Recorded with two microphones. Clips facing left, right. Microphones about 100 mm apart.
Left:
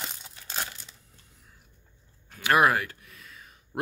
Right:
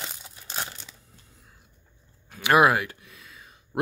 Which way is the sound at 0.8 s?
75° right (ahead or behind).